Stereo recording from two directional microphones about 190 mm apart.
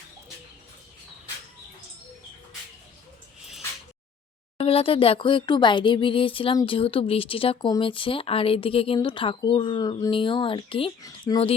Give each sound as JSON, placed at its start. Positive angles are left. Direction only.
{"t": 4.5, "sound": "speech", "side_deg": 30}